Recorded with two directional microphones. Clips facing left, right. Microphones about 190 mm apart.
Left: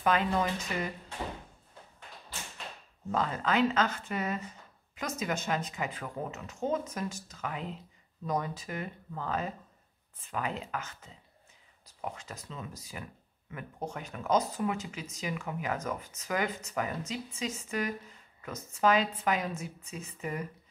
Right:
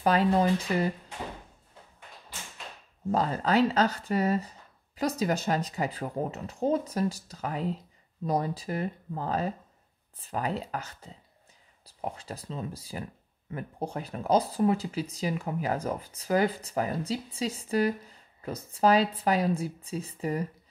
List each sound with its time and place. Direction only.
0.0 s speech: 35° right (ahead or behind)
3.1 s speech: 35° right (ahead or behind)